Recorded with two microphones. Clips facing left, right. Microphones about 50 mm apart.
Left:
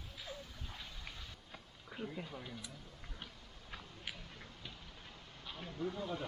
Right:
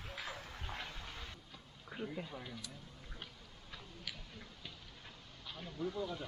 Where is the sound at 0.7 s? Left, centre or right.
Right.